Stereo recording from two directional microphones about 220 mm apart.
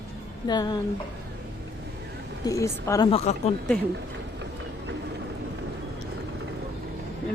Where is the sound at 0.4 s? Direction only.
20° left (ahead or behind).